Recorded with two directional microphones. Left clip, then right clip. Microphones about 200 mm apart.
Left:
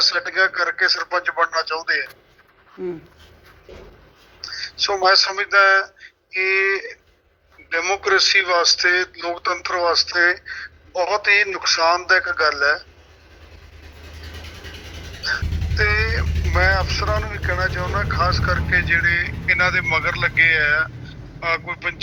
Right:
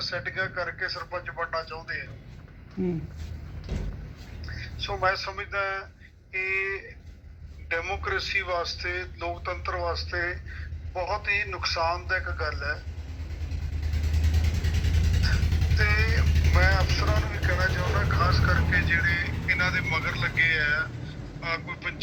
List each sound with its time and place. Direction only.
0.1 s a man's voice: 50° left (ahead or behind)
2.8 s speech: 5° left (ahead or behind)
4.9 s a man's voice: 60° left (ahead or behind)
15.8 s speech: 55° left (ahead or behind)